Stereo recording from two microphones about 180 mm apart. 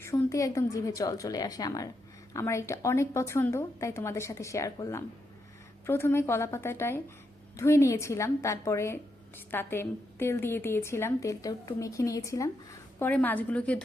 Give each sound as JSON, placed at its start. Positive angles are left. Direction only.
{"t": 0.0, "sound": "a woman's voice", "side_deg": 15}